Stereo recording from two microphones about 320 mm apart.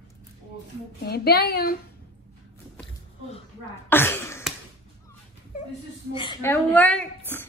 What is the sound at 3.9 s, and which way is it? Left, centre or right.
Speech, centre.